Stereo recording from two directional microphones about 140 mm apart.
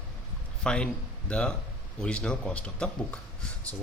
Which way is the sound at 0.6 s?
5° left (ahead or behind).